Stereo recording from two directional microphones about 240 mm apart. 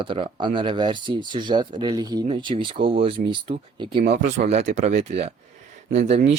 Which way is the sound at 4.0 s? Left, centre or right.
Right.